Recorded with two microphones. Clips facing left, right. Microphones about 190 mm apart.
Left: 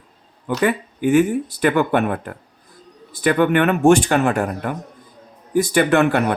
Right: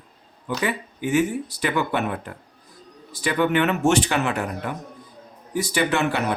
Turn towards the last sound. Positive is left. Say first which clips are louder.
# left 6 dB
turn(degrees=55)  # may be behind; listen again after turning